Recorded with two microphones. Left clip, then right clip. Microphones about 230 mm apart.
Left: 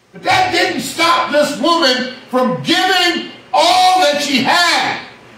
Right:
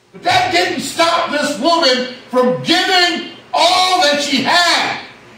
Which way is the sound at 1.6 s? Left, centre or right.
Centre.